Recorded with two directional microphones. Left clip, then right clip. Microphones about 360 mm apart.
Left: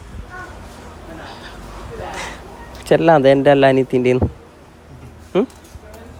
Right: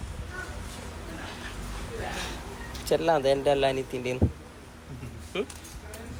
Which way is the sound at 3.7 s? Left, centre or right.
Left.